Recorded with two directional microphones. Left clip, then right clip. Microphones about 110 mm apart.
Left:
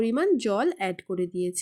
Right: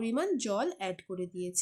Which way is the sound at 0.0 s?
30° left (ahead or behind).